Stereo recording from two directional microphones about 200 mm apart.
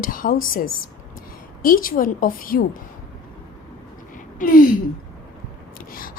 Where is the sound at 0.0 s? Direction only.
45° left (ahead or behind).